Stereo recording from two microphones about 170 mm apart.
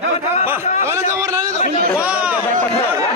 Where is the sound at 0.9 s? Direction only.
15° right (ahead or behind).